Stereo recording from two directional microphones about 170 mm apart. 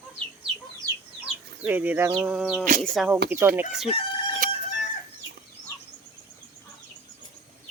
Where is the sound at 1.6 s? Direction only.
10° right (ahead or behind).